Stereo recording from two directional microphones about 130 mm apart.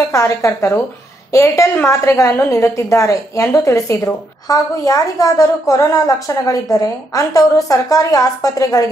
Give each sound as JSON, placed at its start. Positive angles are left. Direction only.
{"t": 0.1, "sound": "a woman's voice", "side_deg": 20}